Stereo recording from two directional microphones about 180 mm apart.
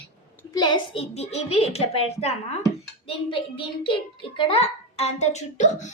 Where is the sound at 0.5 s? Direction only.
25° left (ahead or behind); by 5.9 s 40° left (ahead or behind).